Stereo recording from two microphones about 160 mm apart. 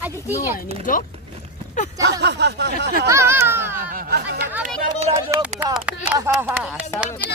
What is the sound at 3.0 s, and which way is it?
Speech, 15° right (ahead or behind).